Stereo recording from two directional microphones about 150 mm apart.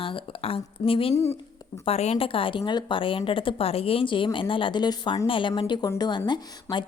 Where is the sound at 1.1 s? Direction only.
15° left (ahead or behind).